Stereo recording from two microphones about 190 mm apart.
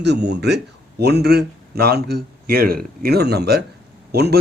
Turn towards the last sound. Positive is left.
turn(degrees=-55)  # may be behind; listen again after turning